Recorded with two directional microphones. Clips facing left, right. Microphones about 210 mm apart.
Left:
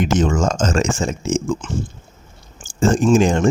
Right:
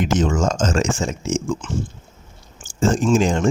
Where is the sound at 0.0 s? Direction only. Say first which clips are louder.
Left 2 dB; 55° left (ahead or behind).